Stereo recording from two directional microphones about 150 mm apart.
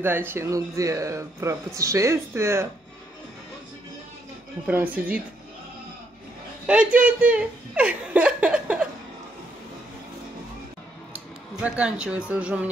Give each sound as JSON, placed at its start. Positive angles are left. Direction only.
{"t": 0.0, "sound": "speech", "side_deg": -15}
{"t": 4.6, "sound": "speech", "side_deg": -10}
{"t": 6.6, "sound": "speech", "side_deg": -5}
{"t": 11.1, "sound": "speech", "side_deg": -10}